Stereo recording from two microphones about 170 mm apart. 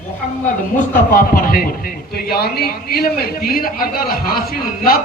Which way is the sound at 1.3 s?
55° left (ahead or behind).